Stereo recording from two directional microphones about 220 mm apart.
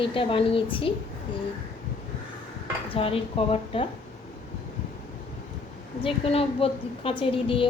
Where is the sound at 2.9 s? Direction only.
25° left (ahead or behind).